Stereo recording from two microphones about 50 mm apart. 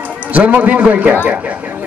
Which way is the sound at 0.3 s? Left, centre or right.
Right.